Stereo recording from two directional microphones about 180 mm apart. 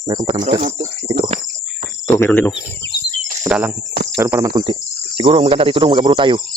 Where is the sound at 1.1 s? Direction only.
30° right (ahead or behind).